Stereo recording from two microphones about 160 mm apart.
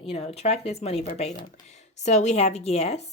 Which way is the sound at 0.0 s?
40° left (ahead or behind).